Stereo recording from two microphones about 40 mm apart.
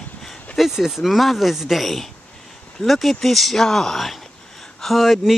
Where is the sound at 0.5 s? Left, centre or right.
Centre.